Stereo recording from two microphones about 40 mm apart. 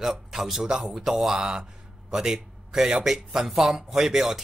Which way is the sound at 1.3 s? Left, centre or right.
Right.